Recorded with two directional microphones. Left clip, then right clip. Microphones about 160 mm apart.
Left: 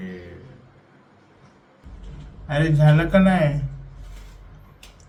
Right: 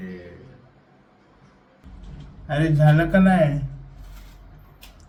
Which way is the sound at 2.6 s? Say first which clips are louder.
Left 1 dB; 15° right (ahead or behind).